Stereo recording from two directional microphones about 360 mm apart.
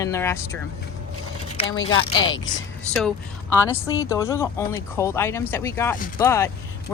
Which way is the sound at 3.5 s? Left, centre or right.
Centre.